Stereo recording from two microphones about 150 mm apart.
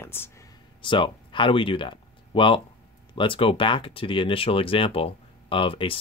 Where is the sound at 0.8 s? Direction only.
35° left (ahead or behind).